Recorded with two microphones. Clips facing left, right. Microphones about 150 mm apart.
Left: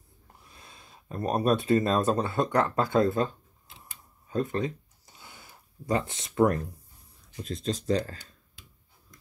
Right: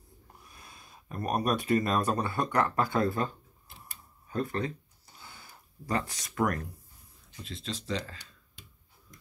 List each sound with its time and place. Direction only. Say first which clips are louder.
0.4 s speech: left 2 dB; 25° left (ahead or behind)
4.3 s a sound: left 3 dB; 20° left (ahead or behind)
7.4 s speech: left 8 dB; 45° left (ahead or behind)